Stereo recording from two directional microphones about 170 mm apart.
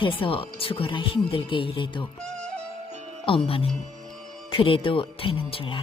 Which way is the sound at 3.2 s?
30° left (ahead or behind).